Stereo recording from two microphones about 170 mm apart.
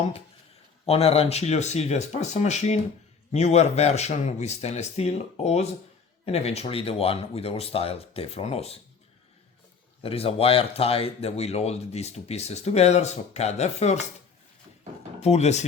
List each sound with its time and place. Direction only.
0.9 s speech: 35° left (ahead or behind)
10.0 s speech: 35° left (ahead or behind)
15.2 s speech: 40° left (ahead or behind)